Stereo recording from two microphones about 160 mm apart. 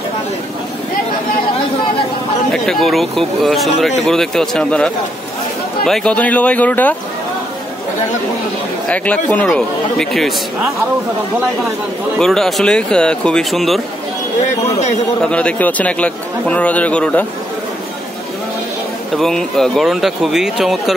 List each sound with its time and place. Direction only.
2.5 s a man's voice: centre (ahead or behind)
8.8 s a man's voice: 10° left (ahead or behind)
12.2 s speech: centre (ahead or behind)
14.7 s a man's voice: 45° left (ahead or behind)
15.2 s a man's voice: 5° left (ahead or behind)
19.1 s speech: centre (ahead or behind)